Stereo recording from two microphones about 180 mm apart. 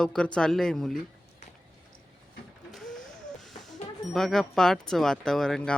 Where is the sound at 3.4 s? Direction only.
Centre (ahead or behind).